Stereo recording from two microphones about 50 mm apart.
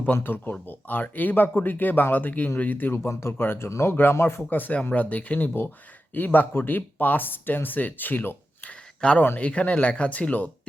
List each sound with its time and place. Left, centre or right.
0.0 s speech: left
2.9 s speech: left
3.7 s speech: left
4.4 s speech: left
8.6 s a sound: left
9.4 s a man's voice: left